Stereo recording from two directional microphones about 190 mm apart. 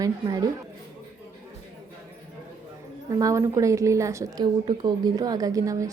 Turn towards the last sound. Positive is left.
turn(degrees=-15)  # may be behind; listen again after turning